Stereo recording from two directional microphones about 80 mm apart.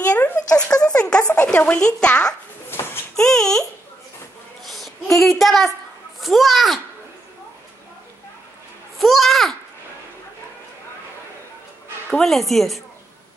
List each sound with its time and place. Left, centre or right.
0.0 s a sound: centre
0.6 s speech: centre
2.7 s a sound: left
3.2 s speech: centre
4.6 s child singing: centre
6.2 s a woman's voice: centre
8.9 s a woman's voice: centre
12.1 s a woman's voice: centre